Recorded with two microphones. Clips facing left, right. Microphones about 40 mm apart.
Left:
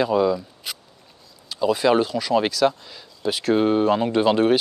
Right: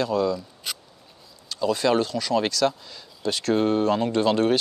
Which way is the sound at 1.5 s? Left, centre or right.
Centre.